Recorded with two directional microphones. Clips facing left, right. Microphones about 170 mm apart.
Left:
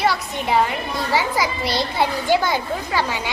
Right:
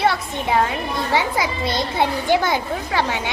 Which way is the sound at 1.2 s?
20° right (ahead or behind).